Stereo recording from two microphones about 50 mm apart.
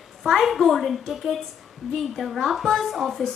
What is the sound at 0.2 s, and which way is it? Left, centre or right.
A woman's voice, centre.